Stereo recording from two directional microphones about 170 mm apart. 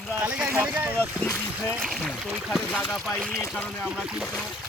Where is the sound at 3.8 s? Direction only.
5° right (ahead or behind).